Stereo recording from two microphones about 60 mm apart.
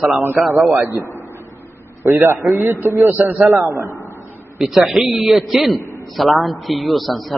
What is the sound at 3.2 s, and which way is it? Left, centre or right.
Speech, centre.